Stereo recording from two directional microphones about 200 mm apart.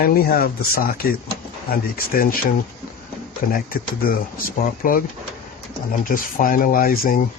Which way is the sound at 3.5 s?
45° left (ahead or behind).